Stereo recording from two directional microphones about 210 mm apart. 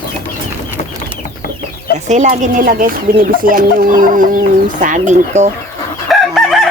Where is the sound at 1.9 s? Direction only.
35° right (ahead or behind).